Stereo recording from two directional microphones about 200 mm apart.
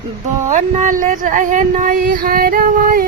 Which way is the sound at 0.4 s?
40° right (ahead or behind).